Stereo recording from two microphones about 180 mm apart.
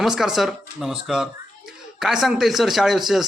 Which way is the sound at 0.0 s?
Centre (ahead or behind).